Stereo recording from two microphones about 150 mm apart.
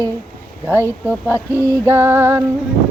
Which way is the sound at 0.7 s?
15° right (ahead or behind).